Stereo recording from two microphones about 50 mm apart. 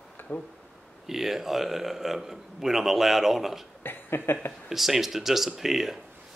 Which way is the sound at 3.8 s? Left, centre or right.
Left.